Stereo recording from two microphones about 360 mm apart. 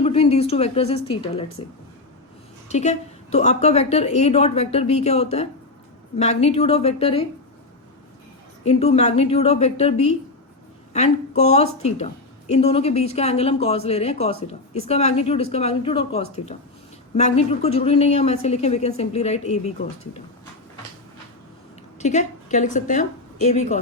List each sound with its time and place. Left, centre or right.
0.0 s a sound: centre
0.5 s a woman's voice: centre
2.6 s a woman's voice: centre
8.6 s a woman's voice: centre
21.9 s a woman's voice: centre